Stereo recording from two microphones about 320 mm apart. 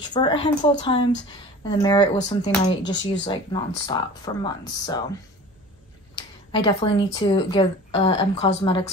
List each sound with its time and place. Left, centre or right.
0.0 s speech: centre
6.1 s speech: centre